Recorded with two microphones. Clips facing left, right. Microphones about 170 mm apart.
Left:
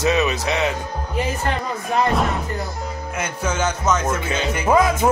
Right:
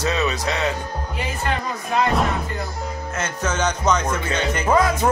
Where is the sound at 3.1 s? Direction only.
10° left (ahead or behind).